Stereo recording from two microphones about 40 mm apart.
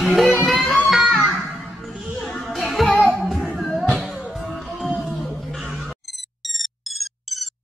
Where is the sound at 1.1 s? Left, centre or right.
Right.